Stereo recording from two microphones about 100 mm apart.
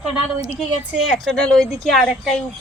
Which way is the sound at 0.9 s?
10° right (ahead or behind).